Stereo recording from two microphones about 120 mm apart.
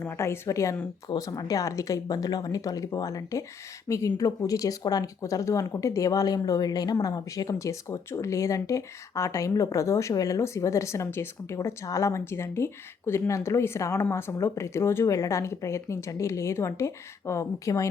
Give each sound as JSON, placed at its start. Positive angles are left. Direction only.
{"t": 0.0, "sound": "speech", "side_deg": 25}